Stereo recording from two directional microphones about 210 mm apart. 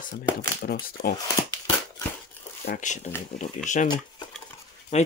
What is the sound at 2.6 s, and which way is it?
Speech, 35° left (ahead or behind).